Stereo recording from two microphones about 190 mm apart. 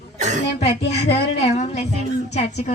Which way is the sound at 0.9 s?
35° left (ahead or behind).